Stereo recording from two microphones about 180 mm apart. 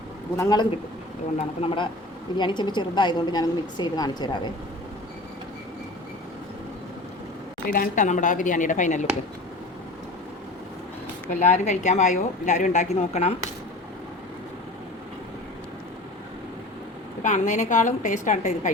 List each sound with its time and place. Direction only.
0.3 s a woman's voice: 20° left (ahead or behind)
7.7 s a woman's voice: 50° left (ahead or behind)
11.3 s a woman's voice: 40° left (ahead or behind)
17.2 s a woman's voice: 45° left (ahead or behind)